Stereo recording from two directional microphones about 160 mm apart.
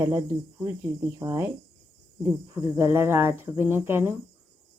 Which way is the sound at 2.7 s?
15° right (ahead or behind).